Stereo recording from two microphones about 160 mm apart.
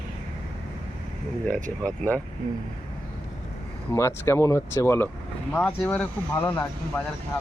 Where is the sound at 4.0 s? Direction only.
15° left (ahead or behind).